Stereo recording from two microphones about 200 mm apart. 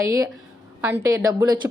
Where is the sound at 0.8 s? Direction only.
10° right (ahead or behind).